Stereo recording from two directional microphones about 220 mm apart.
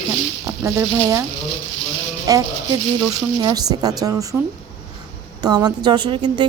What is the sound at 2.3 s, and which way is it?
A woman's voice, 15° right (ahead or behind).